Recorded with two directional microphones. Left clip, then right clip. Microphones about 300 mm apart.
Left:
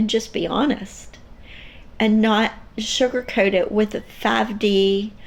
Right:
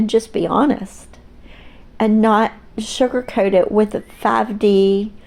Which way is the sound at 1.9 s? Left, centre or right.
Right.